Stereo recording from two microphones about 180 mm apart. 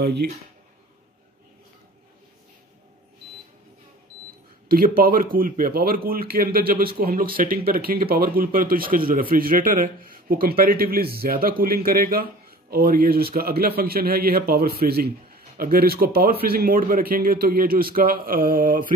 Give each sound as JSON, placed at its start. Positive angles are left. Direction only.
{"t": 0.0, "sound": "speech", "side_deg": -65}
{"t": 4.6, "sound": "a man's voice", "side_deg": -55}